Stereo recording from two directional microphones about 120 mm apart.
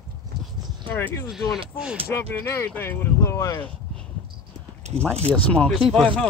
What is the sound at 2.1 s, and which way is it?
Speech, 20° left (ahead or behind).